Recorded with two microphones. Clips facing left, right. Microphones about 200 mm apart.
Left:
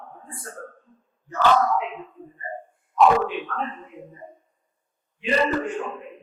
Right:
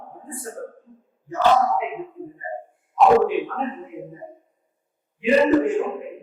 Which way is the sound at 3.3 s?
10° right (ahead or behind).